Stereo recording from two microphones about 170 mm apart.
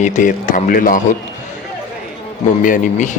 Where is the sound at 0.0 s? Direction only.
50° left (ahead or behind).